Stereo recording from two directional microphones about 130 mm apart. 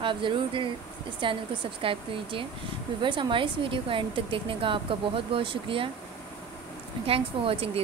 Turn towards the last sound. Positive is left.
turn(degrees=-45)  # may be behind; listen again after turning